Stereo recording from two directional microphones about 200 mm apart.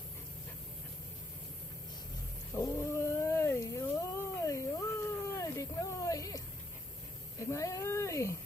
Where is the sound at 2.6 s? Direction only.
15° left (ahead or behind).